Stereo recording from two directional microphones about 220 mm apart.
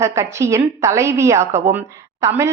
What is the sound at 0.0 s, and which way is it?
Speech, 15° right (ahead or behind).